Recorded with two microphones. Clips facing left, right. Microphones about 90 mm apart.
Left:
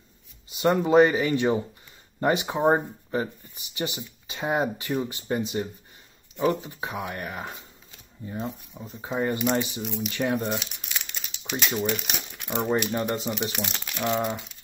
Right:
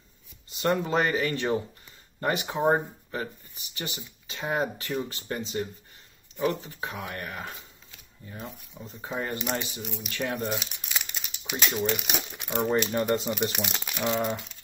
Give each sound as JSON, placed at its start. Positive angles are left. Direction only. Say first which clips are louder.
{"t": 0.5, "sound": "speech", "louder": "left 5 dB", "side_deg": 10}
{"t": 8.7, "sound": "speech", "louder": "left 3 dB", "side_deg": 5}
{"t": 10.4, "sound": "crumpling", "louder": "left 2 dB", "side_deg": 0}
{"t": 11.9, "sound": "speech", "louder": "even", "side_deg": -5}
{"t": 12.5, "sound": "speech", "louder": "even", "side_deg": 10}